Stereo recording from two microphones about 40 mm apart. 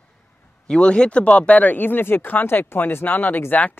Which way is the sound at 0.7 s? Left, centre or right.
Left.